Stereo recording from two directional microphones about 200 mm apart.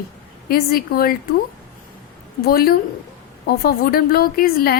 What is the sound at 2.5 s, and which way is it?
A woman's voice, 50° left (ahead or behind).